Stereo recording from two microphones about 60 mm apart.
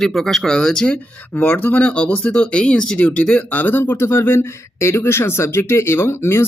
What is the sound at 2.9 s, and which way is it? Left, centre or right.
Speech, left.